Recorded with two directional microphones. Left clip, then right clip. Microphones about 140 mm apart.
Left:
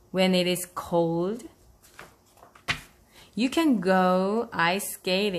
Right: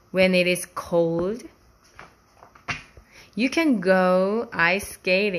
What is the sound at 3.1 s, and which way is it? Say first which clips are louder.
Speech: right 3 dB; centre (ahead or behind).